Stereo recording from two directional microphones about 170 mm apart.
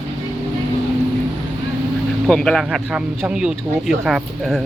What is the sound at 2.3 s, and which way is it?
Speech, 5° left (ahead or behind).